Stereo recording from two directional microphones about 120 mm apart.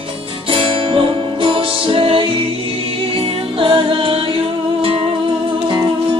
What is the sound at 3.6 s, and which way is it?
Music, 45° right (ahead or behind).